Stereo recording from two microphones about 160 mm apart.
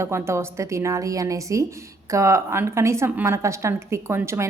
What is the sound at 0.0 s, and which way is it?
A woman's voice, 15° right (ahead or behind).